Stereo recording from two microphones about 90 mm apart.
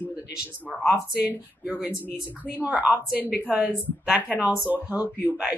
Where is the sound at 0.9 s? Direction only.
15° right (ahead or behind).